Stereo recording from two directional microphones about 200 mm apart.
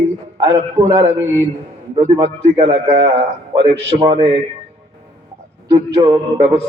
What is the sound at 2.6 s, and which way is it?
A man's voice, 30° right (ahead or behind).